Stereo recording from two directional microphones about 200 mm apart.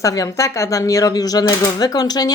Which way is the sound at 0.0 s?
15° left (ahead or behind).